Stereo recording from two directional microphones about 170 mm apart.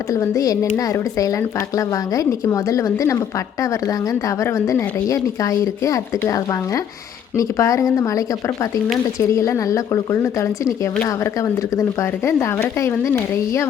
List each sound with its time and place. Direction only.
0.1 s speech: 20° left (ahead or behind)
4.4 s speech: 20° left (ahead or behind)
9.2 s speech: 20° left (ahead or behind)